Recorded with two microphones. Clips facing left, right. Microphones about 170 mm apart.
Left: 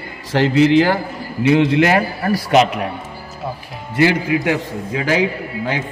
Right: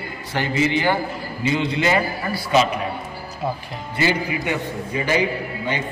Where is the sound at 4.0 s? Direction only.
75° left (ahead or behind).